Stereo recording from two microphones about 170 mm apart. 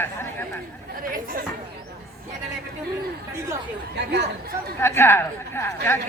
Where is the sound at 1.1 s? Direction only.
55° right (ahead or behind).